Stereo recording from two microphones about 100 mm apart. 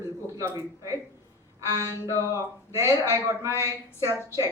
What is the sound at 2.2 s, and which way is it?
Speech, 30° right (ahead or behind).